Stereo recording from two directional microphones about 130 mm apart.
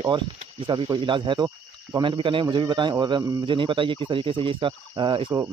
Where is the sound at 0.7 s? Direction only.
35° right (ahead or behind).